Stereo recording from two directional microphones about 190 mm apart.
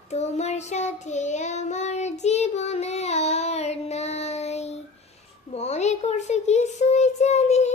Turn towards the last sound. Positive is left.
turn(degrees=35)  # may be behind; listen again after turning